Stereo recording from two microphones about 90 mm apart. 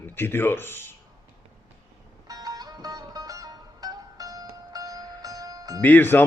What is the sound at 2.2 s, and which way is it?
Music, 45° right (ahead or behind).